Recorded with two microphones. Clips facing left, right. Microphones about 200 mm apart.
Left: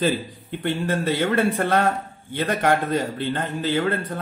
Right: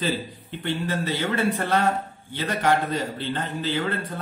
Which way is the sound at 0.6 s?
50° left (ahead or behind).